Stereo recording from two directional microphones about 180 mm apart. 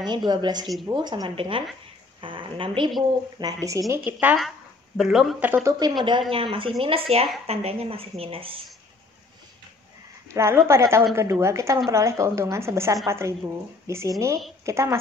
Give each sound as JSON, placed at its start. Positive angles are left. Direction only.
{"t": 0.0, "sound": "a woman's voice", "side_deg": -25}
{"t": 10.3, "sound": "a woman's voice", "side_deg": -15}